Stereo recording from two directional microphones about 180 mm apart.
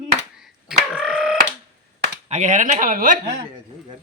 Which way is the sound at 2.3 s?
40° right (ahead or behind).